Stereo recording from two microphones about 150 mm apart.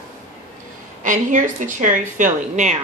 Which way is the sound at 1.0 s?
55° right (ahead or behind).